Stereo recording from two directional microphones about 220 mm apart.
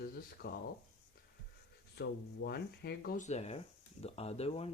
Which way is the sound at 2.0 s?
50° left (ahead or behind).